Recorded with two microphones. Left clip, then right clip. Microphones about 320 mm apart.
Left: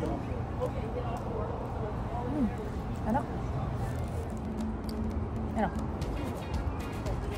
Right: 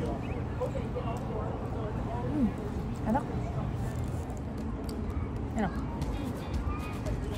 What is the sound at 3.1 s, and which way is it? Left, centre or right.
Speech, centre.